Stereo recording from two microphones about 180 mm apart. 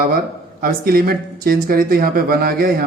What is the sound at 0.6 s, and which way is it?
A woman's voice, 55° right (ahead or behind).